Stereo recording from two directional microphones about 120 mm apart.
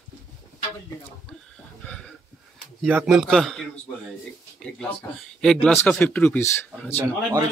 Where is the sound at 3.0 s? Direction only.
Centre (ahead or behind).